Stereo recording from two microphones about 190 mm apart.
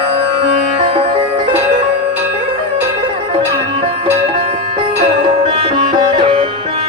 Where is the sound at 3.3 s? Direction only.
30° right (ahead or behind).